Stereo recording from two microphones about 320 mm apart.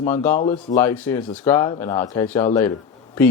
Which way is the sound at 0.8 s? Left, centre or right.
Centre.